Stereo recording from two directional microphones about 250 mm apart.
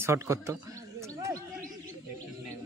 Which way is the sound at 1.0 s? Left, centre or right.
Centre.